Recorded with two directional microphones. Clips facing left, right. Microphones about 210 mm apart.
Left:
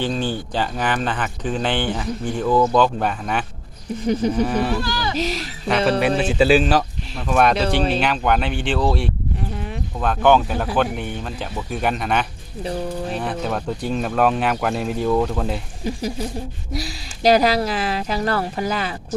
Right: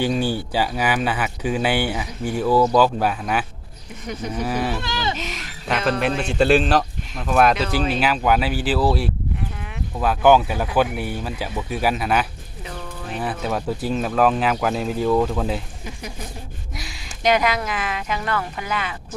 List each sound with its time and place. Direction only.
0.0 s speech: 10° right (ahead or behind)
4.0 s speech: 30° left (ahead or behind)
4.4 s speech: 5° right (ahead or behind)
4.8 s a sound: 20° right (ahead or behind)
5.1 s speech: 35° left (ahead or behind)
5.6 s speech: centre (ahead or behind)
15.8 s speech: 35° left (ahead or behind)